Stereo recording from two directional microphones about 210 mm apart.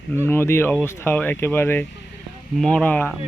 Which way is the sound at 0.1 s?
10° left (ahead or behind).